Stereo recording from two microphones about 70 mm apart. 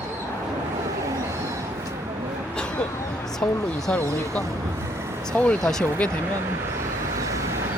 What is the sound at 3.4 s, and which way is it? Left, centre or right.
Speech, centre.